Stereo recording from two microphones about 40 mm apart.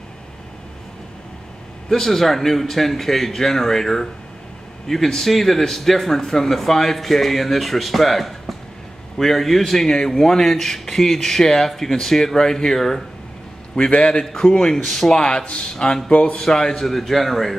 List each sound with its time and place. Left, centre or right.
1.9 s speech: centre
14.0 s a man's voice: centre
16.1 s a man's voice: left
16.3 s speech: centre